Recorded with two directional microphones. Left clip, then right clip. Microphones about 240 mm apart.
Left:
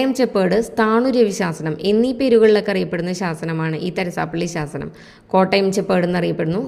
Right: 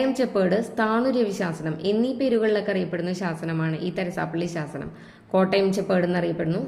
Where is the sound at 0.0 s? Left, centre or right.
Left.